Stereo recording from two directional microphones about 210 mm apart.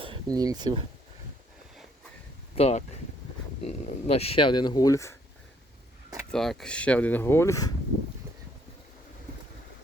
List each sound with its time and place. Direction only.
0.0 s speech: 20° right (ahead or behind)
2.6 s speech: 30° left (ahead or behind); by 5.1 s 15° left (ahead or behind)
6.3 s speech: centre (ahead or behind)